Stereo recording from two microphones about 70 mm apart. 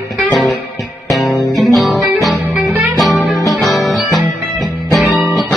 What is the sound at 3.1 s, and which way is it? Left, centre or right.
Music, left.